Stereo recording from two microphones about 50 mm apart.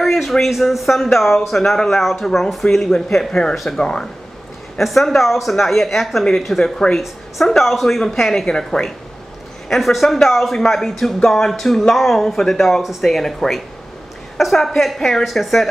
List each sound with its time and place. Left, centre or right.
0.0 s speech: centre
4.7 s speech: centre
6.6 s speech: centre
7.0 s speech: centre